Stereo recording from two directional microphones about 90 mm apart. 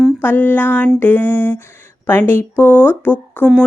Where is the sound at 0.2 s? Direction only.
20° left (ahead or behind).